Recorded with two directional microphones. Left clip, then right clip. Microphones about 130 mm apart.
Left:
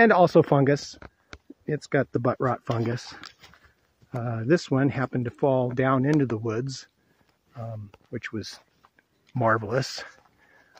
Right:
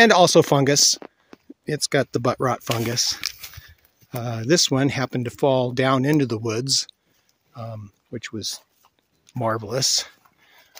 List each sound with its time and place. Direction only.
0.0 s speech: 25° right (ahead or behind)
2.9 s speech: 5° right (ahead or behind)
4.1 s speech: 30° right (ahead or behind); by 8.6 s 10° right (ahead or behind)
9.3 s a sound: 15° right (ahead or behind)